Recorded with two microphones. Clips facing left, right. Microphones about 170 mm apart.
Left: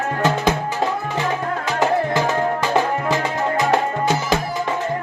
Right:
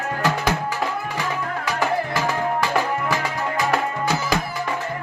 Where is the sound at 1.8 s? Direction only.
20° left (ahead or behind).